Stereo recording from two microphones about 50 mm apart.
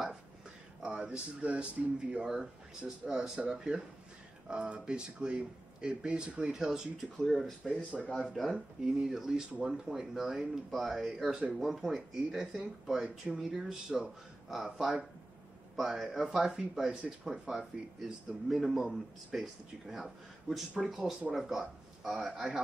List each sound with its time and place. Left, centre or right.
0.8 s speech: centre
1.4 s speech: right
6.5 s speech: centre
7.2 s a man's voice: centre